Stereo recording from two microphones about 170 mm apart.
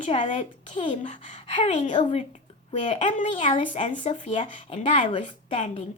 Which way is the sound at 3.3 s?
30° left (ahead or behind).